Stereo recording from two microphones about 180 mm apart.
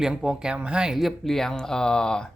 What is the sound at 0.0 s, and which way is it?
Speech, 5° right (ahead or behind).